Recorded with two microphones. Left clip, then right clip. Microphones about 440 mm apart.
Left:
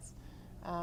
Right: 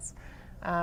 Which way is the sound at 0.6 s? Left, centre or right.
Right.